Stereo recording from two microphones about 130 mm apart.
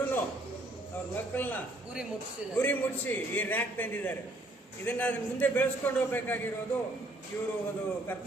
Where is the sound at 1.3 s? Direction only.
15° left (ahead or behind).